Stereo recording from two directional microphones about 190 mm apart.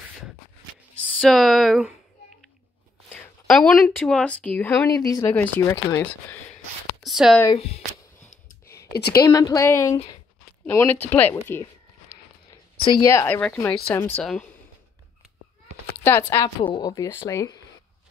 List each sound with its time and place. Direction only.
1.0 s speech: 5° left (ahead or behind)
3.1 s speech: centre (ahead or behind)
7.0 s a sound: centre (ahead or behind)
7.5 s speech: 30° left (ahead or behind)
8.3 s a sound: 45° left (ahead or behind)
9.1 s speech: 20° left (ahead or behind)
13.0 s speech: 15° left (ahead or behind)
16.0 s speech: 10° left (ahead or behind)